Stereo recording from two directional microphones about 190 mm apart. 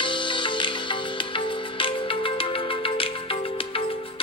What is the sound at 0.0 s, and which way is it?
Music, 25° left (ahead or behind).